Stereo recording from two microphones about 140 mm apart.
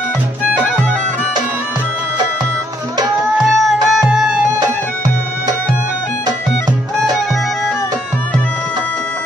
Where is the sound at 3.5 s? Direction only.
Centre (ahead or behind).